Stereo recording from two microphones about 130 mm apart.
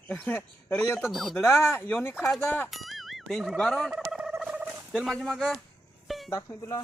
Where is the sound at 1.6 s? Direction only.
20° left (ahead or behind).